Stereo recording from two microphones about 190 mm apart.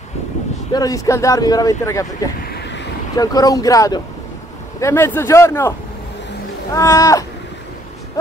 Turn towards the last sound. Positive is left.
turn(degrees=15)  # may be behind; listen again after turning